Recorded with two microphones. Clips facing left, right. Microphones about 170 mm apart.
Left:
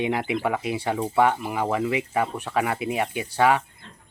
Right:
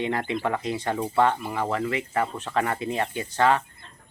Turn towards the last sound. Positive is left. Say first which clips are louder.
# left 1 dB
turn(degrees=10)  # may be behind; listen again after turning